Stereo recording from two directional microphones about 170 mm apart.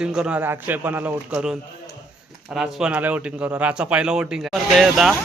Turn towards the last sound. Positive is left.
turn(degrees=0)  # may be behind; listen again after turning